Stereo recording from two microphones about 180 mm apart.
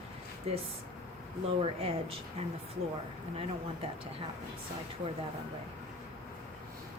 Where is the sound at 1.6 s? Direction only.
35° right (ahead or behind).